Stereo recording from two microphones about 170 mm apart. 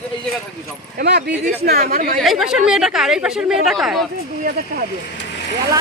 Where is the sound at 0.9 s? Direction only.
75° right (ahead or behind).